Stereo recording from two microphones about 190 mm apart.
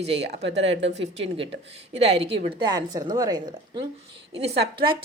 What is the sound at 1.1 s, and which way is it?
A woman's voice, 30° right (ahead or behind).